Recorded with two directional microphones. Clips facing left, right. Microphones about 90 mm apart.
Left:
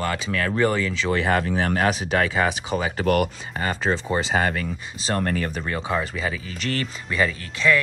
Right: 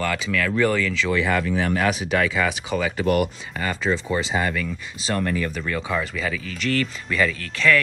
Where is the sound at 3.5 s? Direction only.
35° left (ahead or behind).